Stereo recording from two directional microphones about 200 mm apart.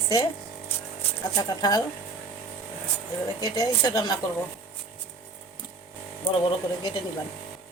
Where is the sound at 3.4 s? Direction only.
20° left (ahead or behind).